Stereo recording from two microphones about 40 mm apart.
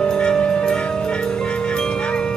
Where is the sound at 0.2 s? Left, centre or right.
Centre.